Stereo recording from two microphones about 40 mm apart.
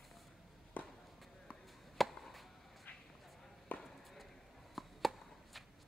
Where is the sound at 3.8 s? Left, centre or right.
Centre.